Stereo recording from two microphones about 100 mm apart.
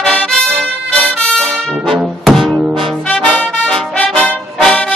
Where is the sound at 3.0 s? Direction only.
5° left (ahead or behind).